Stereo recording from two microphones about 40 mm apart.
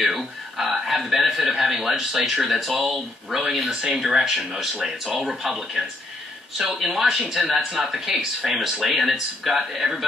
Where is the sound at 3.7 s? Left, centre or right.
Centre.